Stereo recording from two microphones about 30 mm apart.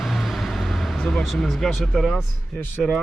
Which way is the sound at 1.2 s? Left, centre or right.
Centre.